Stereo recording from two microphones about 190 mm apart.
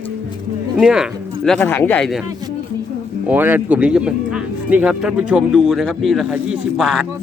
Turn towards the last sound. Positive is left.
turn(degrees=0)  # may be behind; listen again after turning